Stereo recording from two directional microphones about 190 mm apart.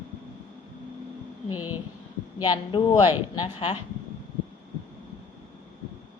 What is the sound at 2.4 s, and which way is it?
A woman's voice, 20° left (ahead or behind).